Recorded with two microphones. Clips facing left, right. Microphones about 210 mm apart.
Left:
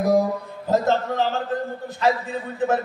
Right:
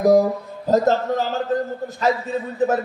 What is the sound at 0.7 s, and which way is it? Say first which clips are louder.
Speech: right 3 dB; 40° right (ahead or behind).